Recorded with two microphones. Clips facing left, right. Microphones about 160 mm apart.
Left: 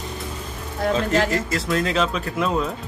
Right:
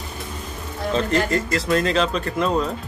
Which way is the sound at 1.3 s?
Centre (ahead or behind).